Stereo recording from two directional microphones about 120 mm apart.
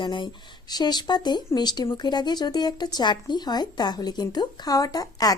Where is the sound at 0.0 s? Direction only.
40° left (ahead or behind).